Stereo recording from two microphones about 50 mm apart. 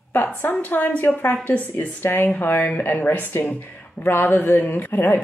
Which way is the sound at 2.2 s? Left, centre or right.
Left.